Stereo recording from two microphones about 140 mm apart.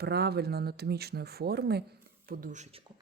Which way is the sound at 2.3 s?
85° right.